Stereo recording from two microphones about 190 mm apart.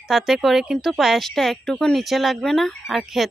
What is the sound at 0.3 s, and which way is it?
Speech, centre (ahead or behind).